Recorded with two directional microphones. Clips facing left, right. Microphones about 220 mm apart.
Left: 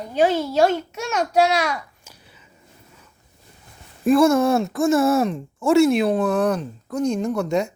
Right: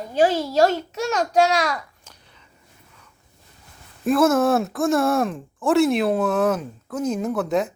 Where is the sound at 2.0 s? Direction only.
10° left (ahead or behind).